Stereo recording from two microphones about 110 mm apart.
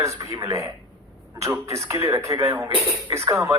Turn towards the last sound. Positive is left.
turn(degrees=-25)  # may be behind; listen again after turning